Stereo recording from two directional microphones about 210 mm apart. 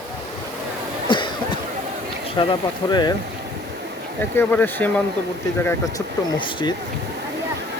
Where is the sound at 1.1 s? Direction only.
20° left (ahead or behind).